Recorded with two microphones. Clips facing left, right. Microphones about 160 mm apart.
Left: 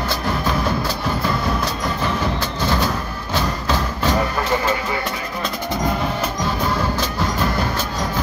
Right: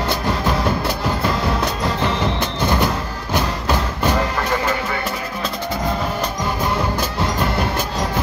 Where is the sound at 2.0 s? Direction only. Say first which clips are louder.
Right 1 dB; 20° right (ahead or behind).